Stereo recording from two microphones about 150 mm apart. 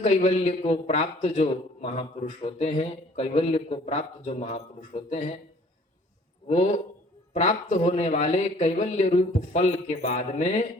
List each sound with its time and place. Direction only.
0.0 s a man's voice: 45° left (ahead or behind)
7.3 s a man's voice: 50° left (ahead or behind)